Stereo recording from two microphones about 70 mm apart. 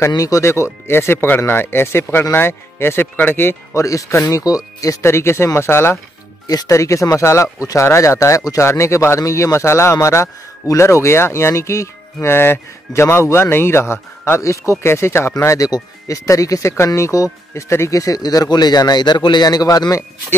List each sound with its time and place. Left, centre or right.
0.2 s a man's voice: left
3.7 s speech: left
5.0 s a man's voice: left
6.4 s speech: left
6.7 s a man's voice: left
16.7 s speech: left